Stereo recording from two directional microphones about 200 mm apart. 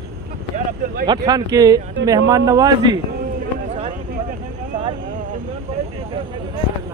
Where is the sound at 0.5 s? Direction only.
45° right (ahead or behind).